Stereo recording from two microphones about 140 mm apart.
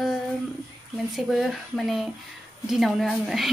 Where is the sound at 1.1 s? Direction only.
Centre (ahead or behind).